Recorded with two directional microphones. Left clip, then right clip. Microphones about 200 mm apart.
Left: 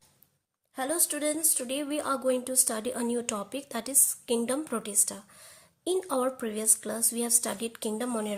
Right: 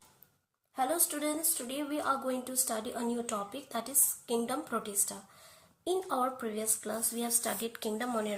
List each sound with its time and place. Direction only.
0.8 s speech: 40° left (ahead or behind)